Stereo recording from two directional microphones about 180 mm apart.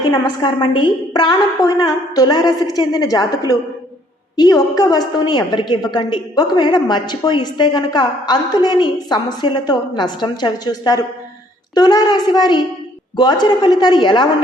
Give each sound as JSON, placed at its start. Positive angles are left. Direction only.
{"t": 0.1, "sound": "a woman's voice", "side_deg": 25}